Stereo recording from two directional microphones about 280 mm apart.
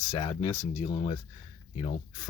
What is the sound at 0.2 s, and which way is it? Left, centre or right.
Speech, centre.